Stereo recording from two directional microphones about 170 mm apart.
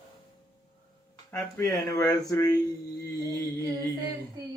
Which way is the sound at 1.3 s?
15° left (ahead or behind).